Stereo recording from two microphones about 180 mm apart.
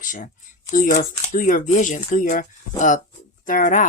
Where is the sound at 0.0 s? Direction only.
45° left (ahead or behind).